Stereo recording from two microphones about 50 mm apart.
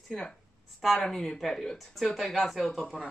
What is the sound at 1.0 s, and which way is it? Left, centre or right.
A man's voice, centre.